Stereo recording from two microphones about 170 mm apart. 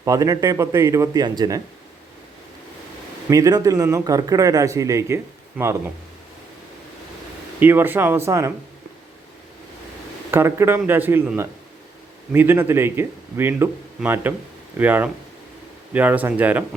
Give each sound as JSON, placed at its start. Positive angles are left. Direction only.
{"t": 0.0, "sound": "speech", "side_deg": -20}
{"t": 3.2, "sound": "speech", "side_deg": -20}
{"t": 7.6, "sound": "speech", "side_deg": -10}
{"t": 10.3, "sound": "speech", "side_deg": -15}